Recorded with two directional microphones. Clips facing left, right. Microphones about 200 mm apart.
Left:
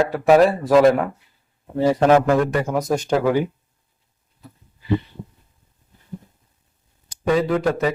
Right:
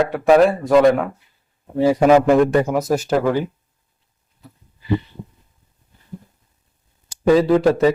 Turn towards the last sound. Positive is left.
turn(degrees=-30)  # may be behind; listen again after turning